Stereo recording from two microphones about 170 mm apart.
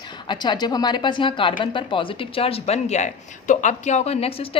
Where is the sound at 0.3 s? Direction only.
25° left (ahead or behind).